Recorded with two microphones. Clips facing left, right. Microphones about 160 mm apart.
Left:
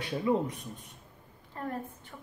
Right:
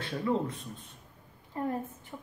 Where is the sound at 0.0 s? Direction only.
15° left (ahead or behind).